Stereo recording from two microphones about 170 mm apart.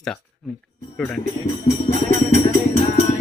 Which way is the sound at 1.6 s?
40° left (ahead or behind).